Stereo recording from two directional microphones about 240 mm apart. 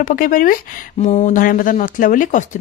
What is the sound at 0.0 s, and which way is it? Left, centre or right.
Speech, left.